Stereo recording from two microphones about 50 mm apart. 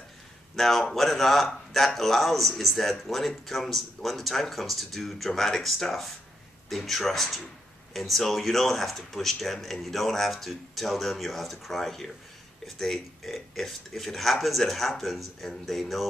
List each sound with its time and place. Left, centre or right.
0.6 s speech: centre